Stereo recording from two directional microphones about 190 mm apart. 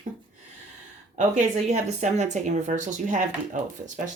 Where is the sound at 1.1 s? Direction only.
40° right (ahead or behind).